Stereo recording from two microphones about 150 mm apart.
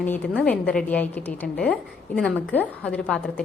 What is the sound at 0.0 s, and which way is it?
A woman's voice, 10° left (ahead or behind).